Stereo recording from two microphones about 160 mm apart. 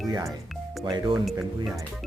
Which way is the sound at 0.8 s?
30° right (ahead or behind).